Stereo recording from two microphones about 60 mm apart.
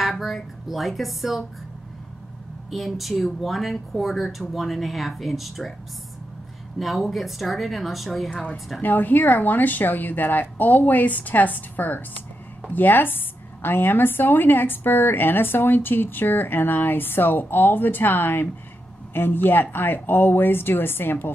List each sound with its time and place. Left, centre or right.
0.0 s speech: centre
2.7 s speech: centre
6.8 s speech: centre
8.8 s a woman's voice: left